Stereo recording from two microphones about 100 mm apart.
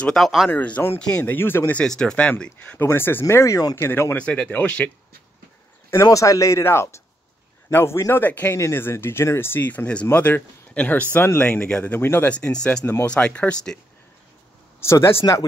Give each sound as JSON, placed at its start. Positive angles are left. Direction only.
{"t": 0.0, "sound": "speech", "side_deg": 0}
{"t": 0.5, "sound": "speech", "side_deg": 15}
{"t": 1.8, "sound": "speech", "side_deg": 10}
{"t": 6.0, "sound": "speech", "side_deg": 35}
{"t": 14.8, "sound": "speech", "side_deg": 25}